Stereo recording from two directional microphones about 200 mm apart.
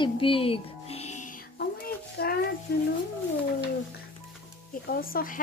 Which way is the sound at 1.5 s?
50° left (ahead or behind).